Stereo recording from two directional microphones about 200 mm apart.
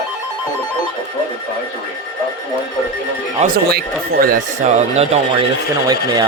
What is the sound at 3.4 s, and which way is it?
Speech, 50° right (ahead or behind).